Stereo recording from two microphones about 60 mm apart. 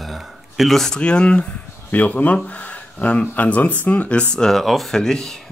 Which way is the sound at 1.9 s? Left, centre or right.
Left.